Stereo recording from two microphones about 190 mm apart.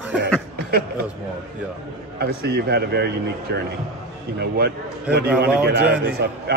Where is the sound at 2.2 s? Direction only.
55° right (ahead or behind).